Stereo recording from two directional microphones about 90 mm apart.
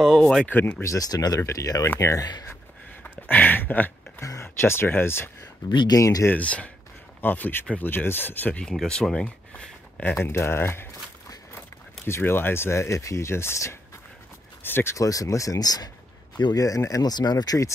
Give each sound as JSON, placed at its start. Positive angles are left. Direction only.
{"t": 0.0, "sound": "speech", "side_deg": 0}
{"t": 0.5, "sound": "speech", "side_deg": 20}
{"t": 0.8, "sound": "speech", "side_deg": 45}
{"t": 3.0, "sound": "a sound", "side_deg": 20}
{"t": 4.2, "sound": "speech", "side_deg": 35}
{"t": 5.7, "sound": "speech", "side_deg": 55}
{"t": 5.9, "sound": "speech", "side_deg": 40}
{"t": 6.2, "sound": "speech", "side_deg": 15}
{"t": 8.6, "sound": "speech", "side_deg": 10}
{"t": 10.1, "sound": "speech", "side_deg": 30}
{"t": 12.1, "sound": "speech", "side_deg": 25}
{"t": 15.0, "sound": "speech", "side_deg": 40}